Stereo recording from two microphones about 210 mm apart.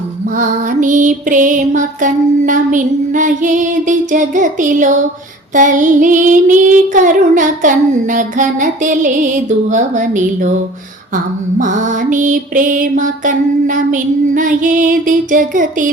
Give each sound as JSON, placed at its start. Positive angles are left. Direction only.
{"t": 0.3, "sound": "child singing", "side_deg": -35}
{"t": 11.6, "sound": "child singing", "side_deg": -35}